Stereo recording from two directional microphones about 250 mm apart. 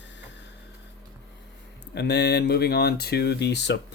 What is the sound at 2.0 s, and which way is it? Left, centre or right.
Speech, left.